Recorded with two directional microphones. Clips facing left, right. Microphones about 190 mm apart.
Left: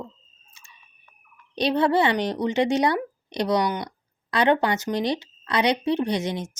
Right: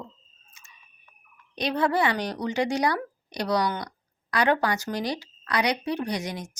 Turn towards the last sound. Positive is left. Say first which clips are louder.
# left 5 dB
turn(degrees=25)  # may be behind; listen again after turning